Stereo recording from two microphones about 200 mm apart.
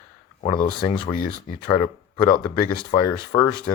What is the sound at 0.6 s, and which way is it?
Speech, 25° left (ahead or behind).